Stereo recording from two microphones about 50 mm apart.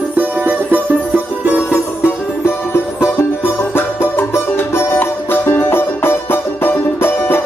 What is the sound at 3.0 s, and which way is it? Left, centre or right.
Music, left.